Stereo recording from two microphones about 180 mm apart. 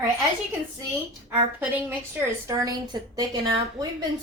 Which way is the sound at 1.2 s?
10° right (ahead or behind).